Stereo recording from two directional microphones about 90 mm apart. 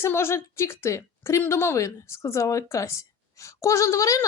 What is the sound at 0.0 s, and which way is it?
A woman's voice, 30° left (ahead or behind).